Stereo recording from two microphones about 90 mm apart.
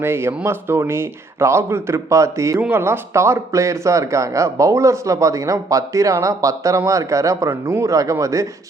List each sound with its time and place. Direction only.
0.0 s speech: 25° right (ahead or behind)
2.6 s speech: 25° right (ahead or behind)